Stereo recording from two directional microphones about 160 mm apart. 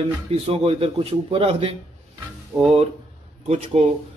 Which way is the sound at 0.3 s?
35° right (ahead or behind).